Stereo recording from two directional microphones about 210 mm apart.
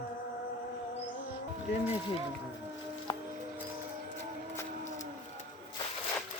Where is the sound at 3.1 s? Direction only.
20° left (ahead or behind).